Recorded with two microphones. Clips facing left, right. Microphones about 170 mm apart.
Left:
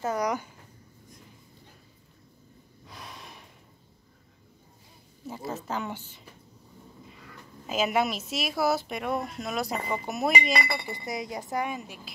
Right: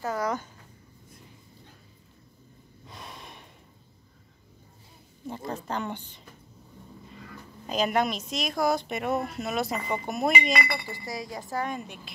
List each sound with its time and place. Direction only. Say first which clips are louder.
0.0 s speech: left 1 dB; 20° left (ahead or behind)
2.9 s gasp: right 1 dB; centre (ahead or behind)
5.2 s speech: right 1 dB; 5° left (ahead or behind)
7.6 s speech: even; 5° left (ahead or behind)
10.5 s speech: even; 25° left (ahead or behind)
11.7 s speech: right 1 dB; centre (ahead or behind)